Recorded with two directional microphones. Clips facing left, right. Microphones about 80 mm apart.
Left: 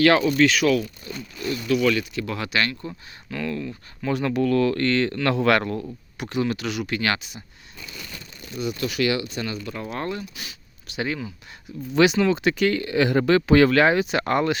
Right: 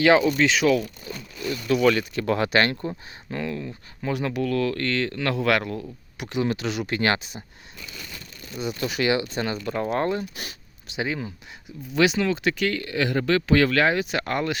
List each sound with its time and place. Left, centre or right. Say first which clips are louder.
0.0 s speech: left 1 dB; centre; by 2.7 s right
2.8 s speech: right 4 dB; right; by 5.8 s centre
6.1 s speech: even; centre
8.5 s speech: left 1 dB; right
10.9 s speech: even; centre
11.9 s speech: left 3 dB; centre